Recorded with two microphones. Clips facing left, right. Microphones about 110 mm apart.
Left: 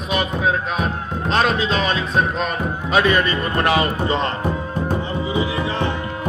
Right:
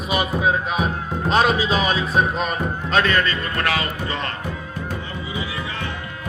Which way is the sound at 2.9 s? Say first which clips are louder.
Left 3 dB; 15° left (ahead or behind).